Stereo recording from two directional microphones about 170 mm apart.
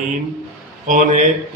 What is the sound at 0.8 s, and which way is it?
Mantra, 50° right (ahead or behind).